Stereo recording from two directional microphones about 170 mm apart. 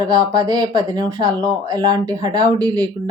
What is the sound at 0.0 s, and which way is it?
Speech, 25° right (ahead or behind).